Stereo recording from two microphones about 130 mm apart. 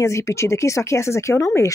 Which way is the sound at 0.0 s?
20° left (ahead or behind).